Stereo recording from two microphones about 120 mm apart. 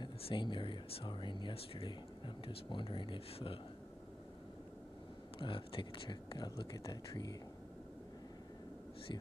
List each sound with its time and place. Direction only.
0.0 s speech: 45° left (ahead or behind)
5.4 s speech: 45° left (ahead or behind)